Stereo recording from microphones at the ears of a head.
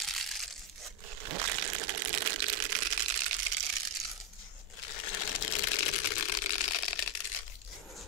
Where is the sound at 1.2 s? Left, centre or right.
Right.